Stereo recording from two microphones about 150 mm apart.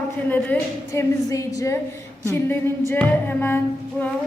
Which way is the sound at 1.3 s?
20° left (ahead or behind).